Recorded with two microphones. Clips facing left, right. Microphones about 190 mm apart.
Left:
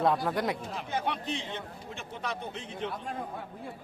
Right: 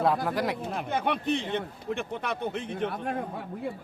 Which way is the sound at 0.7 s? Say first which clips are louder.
Right 4 dB; 55° right (ahead or behind).